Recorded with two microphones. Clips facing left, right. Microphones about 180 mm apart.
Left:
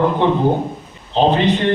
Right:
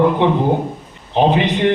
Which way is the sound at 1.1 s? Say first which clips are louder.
Even; 15° right (ahead or behind).